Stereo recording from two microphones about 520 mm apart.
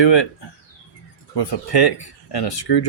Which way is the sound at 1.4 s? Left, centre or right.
Left.